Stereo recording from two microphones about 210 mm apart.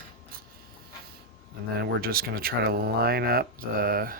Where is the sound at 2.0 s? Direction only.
45° right (ahead or behind).